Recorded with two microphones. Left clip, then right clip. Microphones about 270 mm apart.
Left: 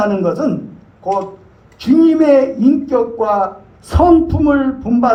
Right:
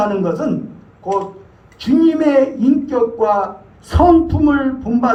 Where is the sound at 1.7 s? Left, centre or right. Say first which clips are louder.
Left 3 dB; left.